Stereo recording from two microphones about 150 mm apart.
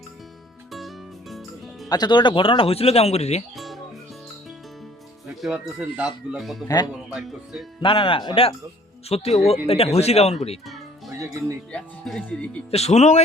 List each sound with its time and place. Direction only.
0.7 s music: centre (ahead or behind)
1.9 s speech: 30° left (ahead or behind); by 3.4 s 45° left (ahead or behind)
3.5 s music: centre (ahead or behind)
5.4 s speech: 5° right (ahead or behind)
6.7 s speech: 25° left (ahead or behind)
7.1 s speech: centre (ahead or behind)
7.8 s speech: 35° left (ahead or behind)
10.7 s music: centre (ahead or behind)
11.7 s speech: 5° left (ahead or behind)
12.7 s speech: 45° left (ahead or behind)